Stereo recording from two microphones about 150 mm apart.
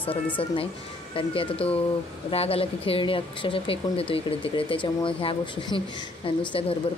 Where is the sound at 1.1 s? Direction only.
35° left (ahead or behind).